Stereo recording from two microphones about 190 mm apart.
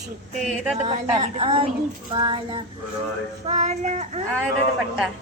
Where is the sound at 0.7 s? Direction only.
35° right (ahead or behind).